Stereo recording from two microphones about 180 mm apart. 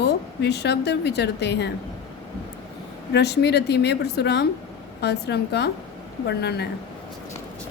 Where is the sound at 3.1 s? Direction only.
65° left (ahead or behind).